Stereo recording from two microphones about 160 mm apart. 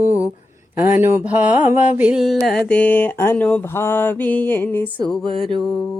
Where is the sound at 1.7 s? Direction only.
45° left (ahead or behind).